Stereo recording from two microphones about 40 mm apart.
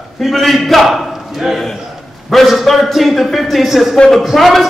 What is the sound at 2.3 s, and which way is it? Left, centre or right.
A man's voice, centre.